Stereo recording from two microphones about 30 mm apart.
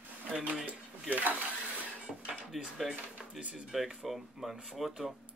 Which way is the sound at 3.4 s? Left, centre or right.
Right.